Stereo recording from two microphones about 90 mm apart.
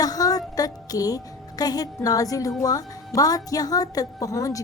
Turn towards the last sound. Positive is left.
turn(degrees=40)  # may be behind; listen again after turning